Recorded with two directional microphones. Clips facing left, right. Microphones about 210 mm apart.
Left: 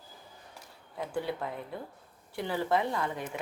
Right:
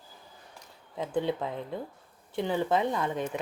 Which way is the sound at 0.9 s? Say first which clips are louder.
Right 4 dB; 20° right (ahead or behind).